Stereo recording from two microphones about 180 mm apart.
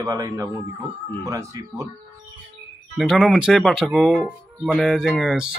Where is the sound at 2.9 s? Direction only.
Centre (ahead or behind).